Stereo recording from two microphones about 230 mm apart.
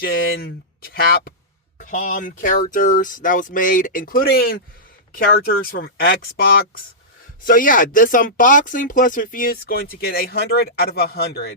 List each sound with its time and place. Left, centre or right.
0.0 s speech: left